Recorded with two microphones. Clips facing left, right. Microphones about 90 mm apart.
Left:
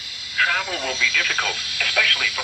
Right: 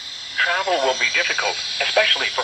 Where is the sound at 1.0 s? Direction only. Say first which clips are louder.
Even; 30° right (ahead or behind).